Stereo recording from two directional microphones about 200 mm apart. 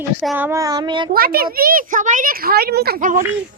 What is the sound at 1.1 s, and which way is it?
A woman's voice, 50° right (ahead or behind).